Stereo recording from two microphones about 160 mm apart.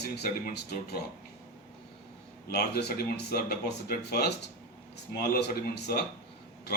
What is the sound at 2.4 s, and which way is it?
Speech, 85° left.